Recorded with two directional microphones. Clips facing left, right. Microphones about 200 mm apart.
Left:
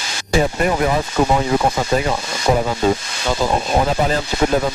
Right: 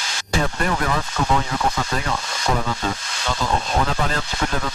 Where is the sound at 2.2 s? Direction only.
10° left (ahead or behind).